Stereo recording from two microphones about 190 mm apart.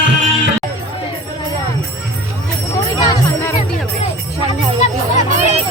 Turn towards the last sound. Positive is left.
turn(degrees=-40)  # may be behind; listen again after turning